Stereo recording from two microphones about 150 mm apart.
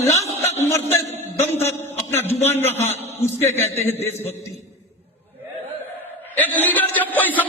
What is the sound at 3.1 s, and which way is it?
A man's voice, 15° left (ahead or behind).